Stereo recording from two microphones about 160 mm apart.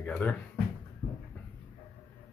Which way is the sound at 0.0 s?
10° left (ahead or behind).